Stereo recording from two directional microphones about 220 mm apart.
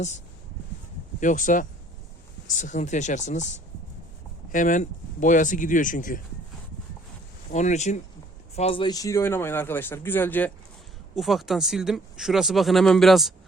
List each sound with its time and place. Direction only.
1.2 s speech: 35° left (ahead or behind)
7.5 s speech: 30° left (ahead or behind); by 13.3 s centre (ahead or behind)